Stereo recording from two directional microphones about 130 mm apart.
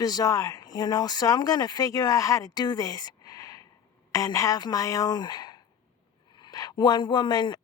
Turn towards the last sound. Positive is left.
turn(degrees=35)  # may be behind; listen again after turning